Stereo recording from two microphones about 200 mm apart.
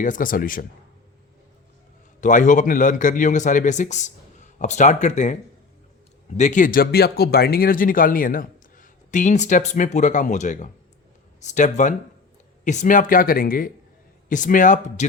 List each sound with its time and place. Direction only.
0.0 s speech: 40° left (ahead or behind)
2.2 s speech: 40° left (ahead or behind)